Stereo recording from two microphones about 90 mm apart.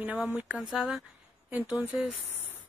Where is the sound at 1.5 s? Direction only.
20° right (ahead or behind).